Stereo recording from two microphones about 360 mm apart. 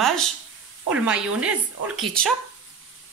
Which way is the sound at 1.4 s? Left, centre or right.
Centre.